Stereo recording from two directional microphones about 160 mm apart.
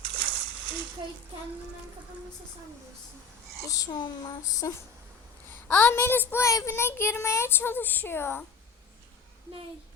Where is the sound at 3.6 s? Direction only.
20° left (ahead or behind).